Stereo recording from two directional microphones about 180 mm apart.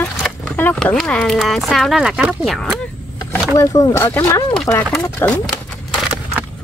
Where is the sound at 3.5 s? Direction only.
20° left (ahead or behind).